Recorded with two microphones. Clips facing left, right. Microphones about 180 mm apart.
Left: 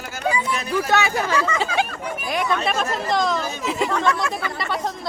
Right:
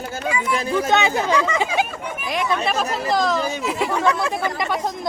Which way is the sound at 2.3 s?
Centre (ahead or behind).